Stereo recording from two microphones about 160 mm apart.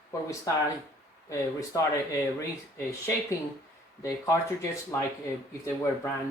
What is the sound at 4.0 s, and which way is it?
Speech, 20° left (ahead or behind).